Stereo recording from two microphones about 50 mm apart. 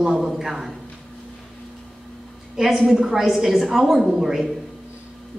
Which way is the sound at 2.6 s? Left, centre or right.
Centre.